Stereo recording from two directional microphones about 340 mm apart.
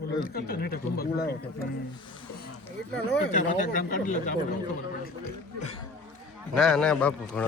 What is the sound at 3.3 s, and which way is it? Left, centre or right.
Speech, left.